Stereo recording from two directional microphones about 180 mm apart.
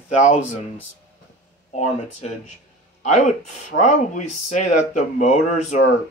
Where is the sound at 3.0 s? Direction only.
40° left (ahead or behind).